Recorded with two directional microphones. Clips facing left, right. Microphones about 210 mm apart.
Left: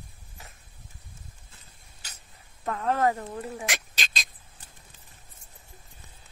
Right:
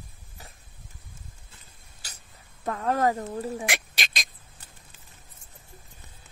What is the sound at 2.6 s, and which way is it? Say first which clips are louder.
Speech: right 1 dB; 40° right (ahead or behind).